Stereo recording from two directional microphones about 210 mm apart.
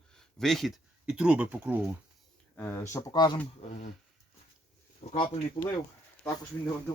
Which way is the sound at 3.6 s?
35° left (ahead or behind).